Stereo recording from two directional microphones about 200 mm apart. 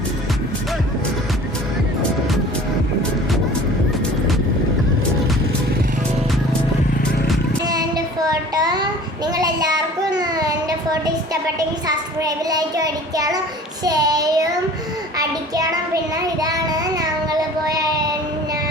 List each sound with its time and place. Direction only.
7.6 s child singing: 20° right (ahead or behind)
16.2 s child singing: 20° right (ahead or behind)